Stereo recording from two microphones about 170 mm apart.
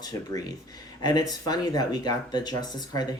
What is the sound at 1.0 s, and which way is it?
Speech, 25° left (ahead or behind).